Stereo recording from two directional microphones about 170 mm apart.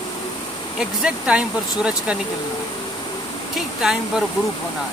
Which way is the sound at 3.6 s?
Centre (ahead or behind).